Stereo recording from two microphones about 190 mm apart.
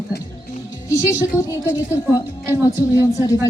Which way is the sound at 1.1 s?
15° left (ahead or behind).